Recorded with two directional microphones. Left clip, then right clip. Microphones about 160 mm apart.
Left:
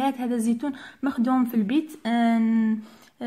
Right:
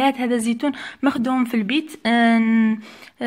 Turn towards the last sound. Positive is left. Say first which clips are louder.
# right 3 dB
turn(degrees=-25)  # may be behind; listen again after turning